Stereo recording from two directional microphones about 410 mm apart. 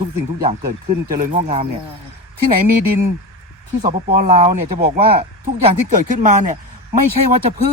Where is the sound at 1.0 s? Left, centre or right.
Centre.